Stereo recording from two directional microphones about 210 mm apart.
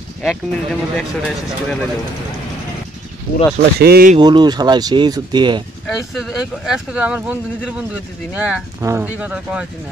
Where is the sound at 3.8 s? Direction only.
45° right (ahead or behind).